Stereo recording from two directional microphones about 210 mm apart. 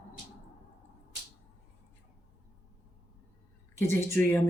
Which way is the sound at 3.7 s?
10° left (ahead or behind).